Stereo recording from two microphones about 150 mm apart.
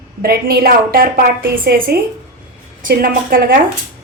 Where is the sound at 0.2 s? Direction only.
80° right.